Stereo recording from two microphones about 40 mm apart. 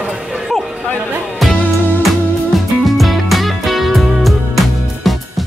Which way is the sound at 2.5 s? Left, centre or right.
Centre.